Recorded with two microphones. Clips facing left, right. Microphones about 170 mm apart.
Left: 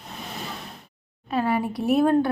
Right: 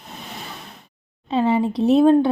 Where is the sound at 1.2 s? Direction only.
20° right (ahead or behind).